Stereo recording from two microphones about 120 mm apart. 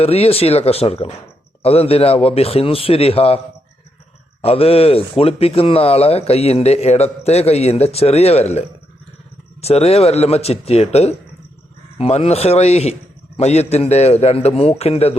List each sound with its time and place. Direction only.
0.0 s speech: 55° left (ahead or behind)